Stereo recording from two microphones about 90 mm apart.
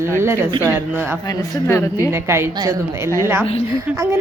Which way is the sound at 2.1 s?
25° right (ahead or behind).